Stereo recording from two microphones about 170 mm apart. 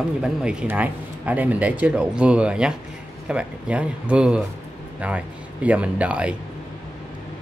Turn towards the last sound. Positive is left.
turn(degrees=-5)  # may be behind; listen again after turning